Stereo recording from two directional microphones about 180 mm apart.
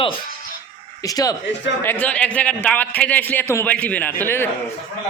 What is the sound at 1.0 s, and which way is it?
Speech, 20° left (ahead or behind).